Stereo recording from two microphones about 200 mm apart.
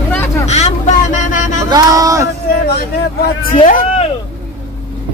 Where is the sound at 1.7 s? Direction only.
15° right (ahead or behind).